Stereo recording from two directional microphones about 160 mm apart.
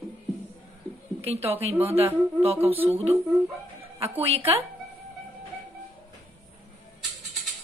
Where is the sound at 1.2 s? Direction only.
40° right (ahead or behind).